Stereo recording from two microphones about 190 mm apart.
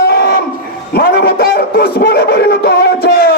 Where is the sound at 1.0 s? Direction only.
55° left (ahead or behind).